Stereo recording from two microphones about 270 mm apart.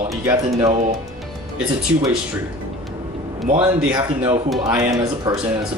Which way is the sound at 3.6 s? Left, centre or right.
Centre.